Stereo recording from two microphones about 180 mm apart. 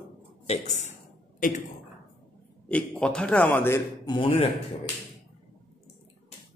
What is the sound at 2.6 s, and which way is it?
A man's voice, 10° left (ahead or behind).